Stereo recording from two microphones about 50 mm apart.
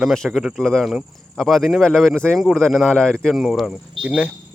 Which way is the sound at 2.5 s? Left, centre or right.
Centre.